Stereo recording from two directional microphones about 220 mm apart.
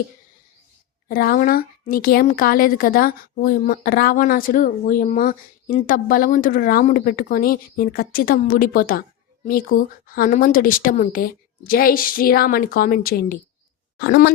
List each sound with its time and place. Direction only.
1.0 s a woman's voice: 40° left (ahead or behind)